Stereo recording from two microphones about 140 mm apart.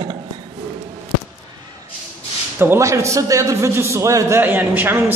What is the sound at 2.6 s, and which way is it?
A man's voice, 20° right (ahead or behind).